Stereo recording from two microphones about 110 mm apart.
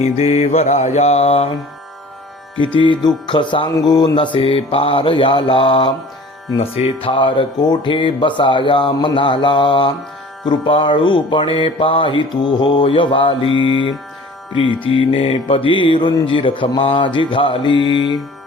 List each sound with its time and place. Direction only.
0.0 s mantra: 70° left (ahead or behind)
2.7 s mantra: 45° left (ahead or behind)
6.6 s mantra: 65° left (ahead or behind); by 18.2 s 45° left (ahead or behind)